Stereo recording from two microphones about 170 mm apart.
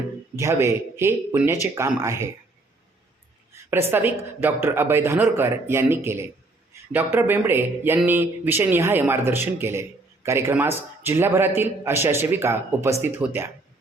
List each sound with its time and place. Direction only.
0.3 s a man's voice: 15° right (ahead or behind)
3.7 s a man's voice: 15° right (ahead or behind)